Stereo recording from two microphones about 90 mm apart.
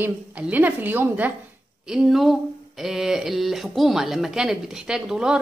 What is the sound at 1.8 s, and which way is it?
Speech, 5° right (ahead or behind).